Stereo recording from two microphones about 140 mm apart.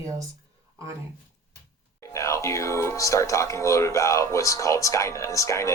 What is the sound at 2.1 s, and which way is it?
Speech, 20° left (ahead or behind).